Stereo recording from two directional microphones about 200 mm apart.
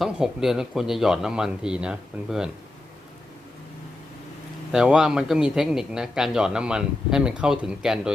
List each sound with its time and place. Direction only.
0.0 s a man's voice: centre (ahead or behind)
4.7 s a man's voice: 5° right (ahead or behind)